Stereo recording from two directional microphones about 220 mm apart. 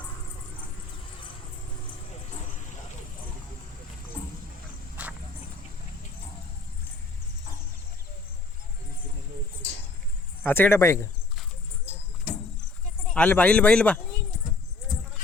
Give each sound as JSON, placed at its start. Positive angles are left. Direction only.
{"t": 2.0, "sound": "vehicle", "side_deg": 30}
{"t": 5.0, "sound": "walk", "side_deg": -5}
{"t": 10.4, "sound": "speech", "side_deg": 10}
{"t": 13.1, "sound": "speech", "side_deg": 5}